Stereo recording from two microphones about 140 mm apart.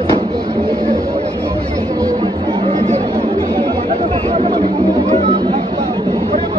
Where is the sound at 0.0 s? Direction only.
30° right (ahead or behind).